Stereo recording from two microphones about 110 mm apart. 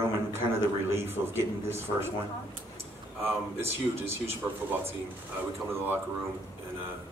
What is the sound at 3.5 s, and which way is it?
Speech, 20° right (ahead or behind).